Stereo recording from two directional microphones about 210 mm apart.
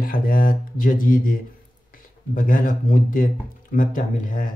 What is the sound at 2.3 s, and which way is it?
Speech, 40° left (ahead or behind).